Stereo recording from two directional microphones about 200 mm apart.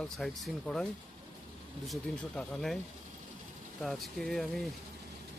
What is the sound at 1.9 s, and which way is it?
Speech, centre (ahead or behind).